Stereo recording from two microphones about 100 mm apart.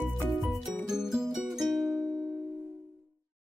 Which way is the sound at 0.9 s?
5° right (ahead or behind).